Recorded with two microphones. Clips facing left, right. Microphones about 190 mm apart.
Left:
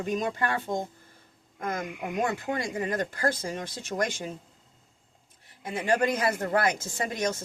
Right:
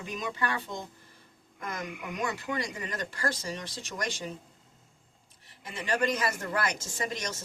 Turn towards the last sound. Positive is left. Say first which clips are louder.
# left 5 dB
turn(degrees=55)  # may be behind; listen again after turning